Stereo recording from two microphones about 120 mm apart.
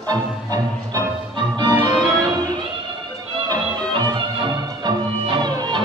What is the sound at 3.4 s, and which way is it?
Music, 35° right (ahead or behind).